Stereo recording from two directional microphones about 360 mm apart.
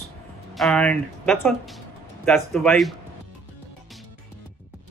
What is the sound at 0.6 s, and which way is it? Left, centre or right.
Speech, centre.